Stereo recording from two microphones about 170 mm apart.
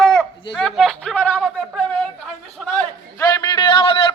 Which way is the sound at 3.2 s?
25° left (ahead or behind).